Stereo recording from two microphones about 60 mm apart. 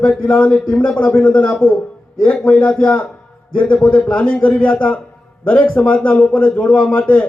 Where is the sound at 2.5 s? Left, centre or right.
Left.